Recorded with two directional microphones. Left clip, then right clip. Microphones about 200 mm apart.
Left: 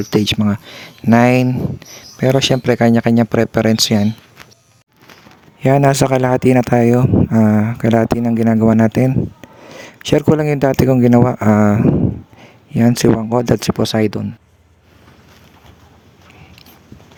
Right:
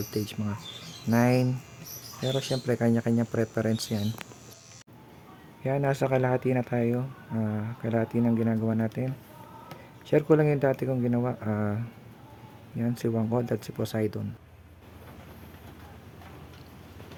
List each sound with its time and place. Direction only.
0.1 s speech: 40° left (ahead or behind)
5.6 s speech: 50° left (ahead or behind)